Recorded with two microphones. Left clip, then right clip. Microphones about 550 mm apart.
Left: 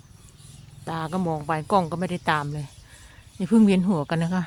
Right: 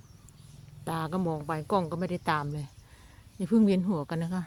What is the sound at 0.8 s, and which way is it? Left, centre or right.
Speech, right.